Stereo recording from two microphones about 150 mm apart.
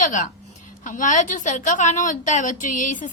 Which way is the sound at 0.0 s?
60° left (ahead or behind).